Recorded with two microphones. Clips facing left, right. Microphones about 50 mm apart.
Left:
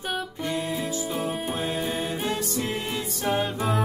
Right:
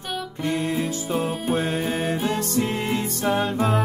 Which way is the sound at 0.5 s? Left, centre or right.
Right.